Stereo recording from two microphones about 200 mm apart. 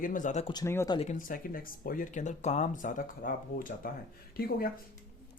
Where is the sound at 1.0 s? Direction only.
40° left (ahead or behind).